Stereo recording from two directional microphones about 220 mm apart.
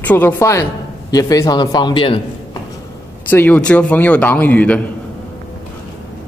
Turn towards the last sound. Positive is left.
turn(degrees=5)  # may be behind; listen again after turning